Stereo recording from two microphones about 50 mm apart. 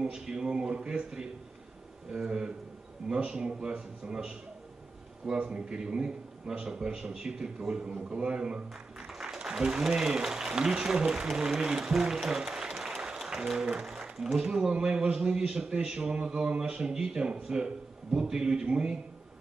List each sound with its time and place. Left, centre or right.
0.0 s a man's voice: centre
9.0 s a man's voice: centre